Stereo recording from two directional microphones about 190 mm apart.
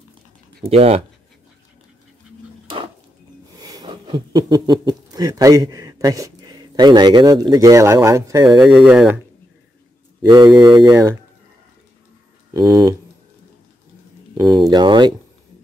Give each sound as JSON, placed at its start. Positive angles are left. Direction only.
{"t": 0.7, "sound": "speech", "side_deg": -30}
{"t": 3.5, "sound": "speech", "side_deg": -20}
{"t": 8.5, "sound": "speech", "side_deg": -5}
{"t": 10.3, "sound": "speech", "side_deg": -20}
{"t": 12.5, "sound": "speech", "side_deg": -20}
{"t": 14.3, "sound": "a sound", "side_deg": -20}
{"t": 14.7, "sound": "speech", "side_deg": -25}